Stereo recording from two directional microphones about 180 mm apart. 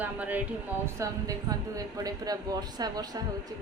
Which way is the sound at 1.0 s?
20° right (ahead or behind).